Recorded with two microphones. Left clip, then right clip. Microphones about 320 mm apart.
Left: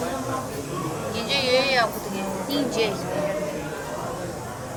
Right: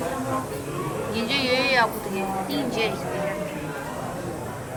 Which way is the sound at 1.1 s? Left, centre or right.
Centre.